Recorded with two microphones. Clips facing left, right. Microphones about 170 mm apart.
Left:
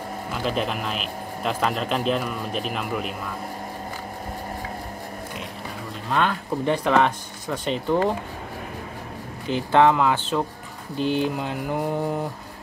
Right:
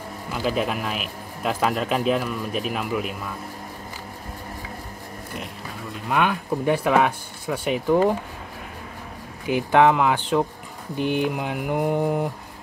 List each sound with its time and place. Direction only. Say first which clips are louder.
0.3 s a man's voice: right 2 dB; 5° right (ahead or behind)
6.0 s a man's voice: right 1 dB; 10° right (ahead or behind)
9.5 s a man's voice: right 1 dB; 15° right (ahead or behind)